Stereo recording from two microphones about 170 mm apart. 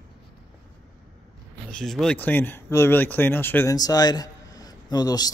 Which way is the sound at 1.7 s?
Centre (ahead or behind).